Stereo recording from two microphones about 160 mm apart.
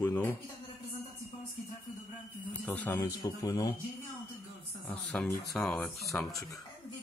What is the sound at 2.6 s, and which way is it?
Speech, 10° left (ahead or behind).